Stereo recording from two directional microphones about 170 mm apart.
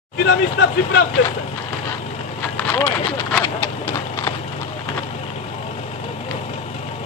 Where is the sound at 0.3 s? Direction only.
90° left.